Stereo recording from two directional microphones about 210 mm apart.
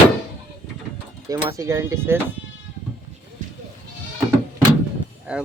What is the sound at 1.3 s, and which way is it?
Speech, 15° right (ahead or behind).